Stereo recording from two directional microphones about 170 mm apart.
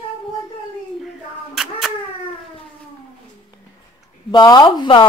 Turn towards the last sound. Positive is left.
turn(degrees=30)  # may be behind; listen again after turning